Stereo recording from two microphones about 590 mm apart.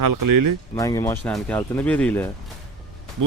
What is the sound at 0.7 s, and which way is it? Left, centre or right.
Speech, centre.